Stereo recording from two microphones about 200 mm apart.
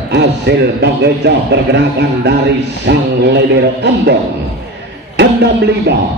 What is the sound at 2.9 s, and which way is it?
A man's voice, 55° right (ahead or behind).